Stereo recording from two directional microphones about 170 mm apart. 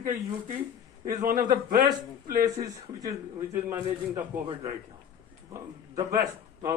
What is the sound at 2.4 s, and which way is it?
A man's voice, 20° right (ahead or behind).